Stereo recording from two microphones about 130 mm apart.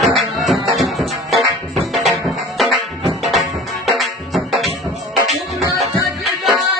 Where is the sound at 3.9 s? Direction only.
Centre (ahead or behind).